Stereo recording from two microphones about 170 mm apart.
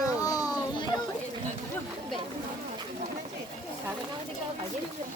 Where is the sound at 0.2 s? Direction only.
20° left (ahead or behind).